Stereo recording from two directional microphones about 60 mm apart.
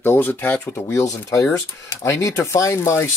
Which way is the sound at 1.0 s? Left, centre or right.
Left.